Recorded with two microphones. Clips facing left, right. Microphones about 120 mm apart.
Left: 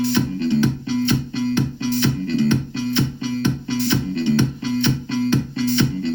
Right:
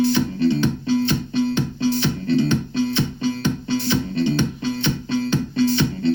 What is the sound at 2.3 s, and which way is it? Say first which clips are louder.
Music: right 3 dB; 20° right (ahead or behind).